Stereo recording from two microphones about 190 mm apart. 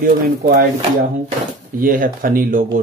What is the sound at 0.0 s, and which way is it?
Speech, 50° right (ahead or behind).